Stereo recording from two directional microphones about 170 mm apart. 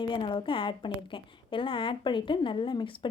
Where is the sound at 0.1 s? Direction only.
30° left (ahead or behind).